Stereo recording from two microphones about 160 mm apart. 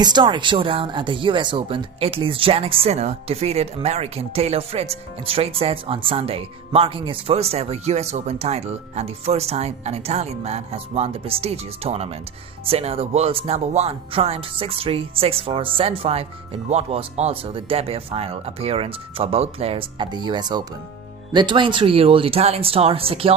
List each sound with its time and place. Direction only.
0.0 s speech: 25° right (ahead or behind)